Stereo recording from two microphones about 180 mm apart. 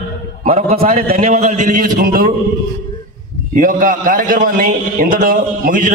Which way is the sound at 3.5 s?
45° right (ahead or behind).